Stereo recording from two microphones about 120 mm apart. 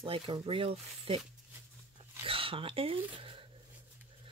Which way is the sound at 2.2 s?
50° right (ahead or behind).